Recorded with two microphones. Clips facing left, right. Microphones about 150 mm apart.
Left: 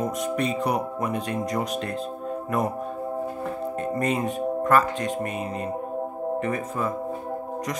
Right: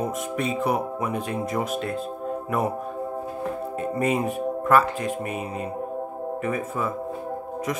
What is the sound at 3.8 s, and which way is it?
Speech, 10° right (ahead or behind).